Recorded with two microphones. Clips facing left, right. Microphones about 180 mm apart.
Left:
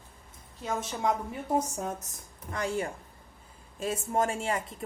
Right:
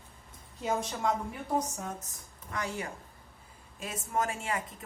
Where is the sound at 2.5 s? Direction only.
30° left (ahead or behind).